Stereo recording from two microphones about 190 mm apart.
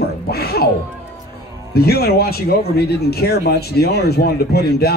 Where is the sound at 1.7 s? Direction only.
55° left (ahead or behind).